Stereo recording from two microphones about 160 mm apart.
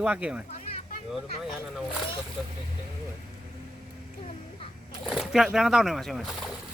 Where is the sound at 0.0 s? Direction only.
10° right (ahead or behind).